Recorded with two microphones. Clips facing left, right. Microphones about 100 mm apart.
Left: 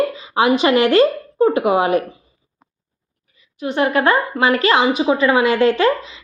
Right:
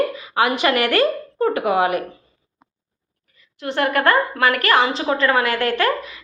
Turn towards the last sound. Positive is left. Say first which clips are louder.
# left 4 dB
turn(degrees=20)  # may be behind; listen again after turning